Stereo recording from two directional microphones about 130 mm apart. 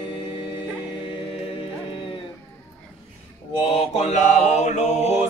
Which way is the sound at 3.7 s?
50° left (ahead or behind).